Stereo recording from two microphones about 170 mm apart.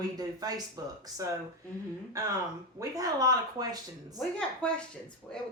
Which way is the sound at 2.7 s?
20° right (ahead or behind).